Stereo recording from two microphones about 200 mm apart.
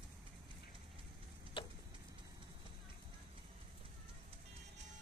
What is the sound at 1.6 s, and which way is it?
Vehicle, 25° left (ahead or behind).